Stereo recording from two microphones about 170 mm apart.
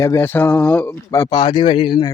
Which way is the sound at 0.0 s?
15° left (ahead or behind).